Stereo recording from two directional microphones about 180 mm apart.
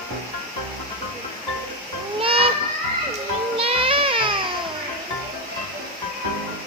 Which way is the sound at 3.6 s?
30° right (ahead or behind).